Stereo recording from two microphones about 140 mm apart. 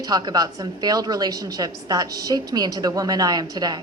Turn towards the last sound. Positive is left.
turn(degrees=-30)  # may be behind; listen again after turning